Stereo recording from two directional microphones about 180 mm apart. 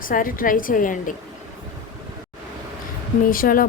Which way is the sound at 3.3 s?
50° left (ahead or behind).